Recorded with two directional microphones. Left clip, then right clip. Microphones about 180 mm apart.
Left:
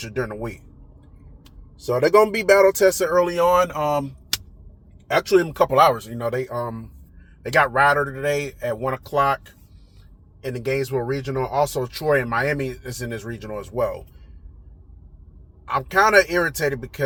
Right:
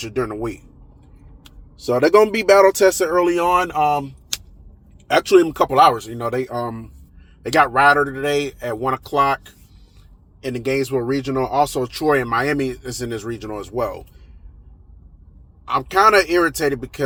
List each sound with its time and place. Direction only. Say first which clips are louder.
0.1 s speech: right 4 dB; 35° right (ahead or behind)
1.8 s speech: right 2 dB; 30° right (ahead or behind)
5.1 s speech: right 4 dB; 35° right (ahead or behind)
10.4 s speech: right 3 dB; 35° right (ahead or behind)
15.7 s speech: right 2 dB; 30° right (ahead or behind)